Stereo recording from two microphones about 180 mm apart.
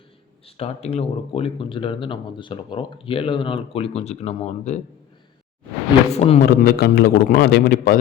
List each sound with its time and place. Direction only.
0.4 s speech: 35° left (ahead or behind)
6.1 s speech: 35° left (ahead or behind)
6.4 s a man's voice: 55° left (ahead or behind)